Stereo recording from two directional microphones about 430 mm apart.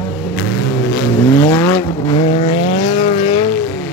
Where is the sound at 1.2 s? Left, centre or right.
Centre.